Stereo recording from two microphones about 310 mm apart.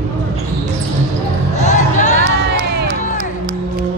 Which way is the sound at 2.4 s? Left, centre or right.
Right.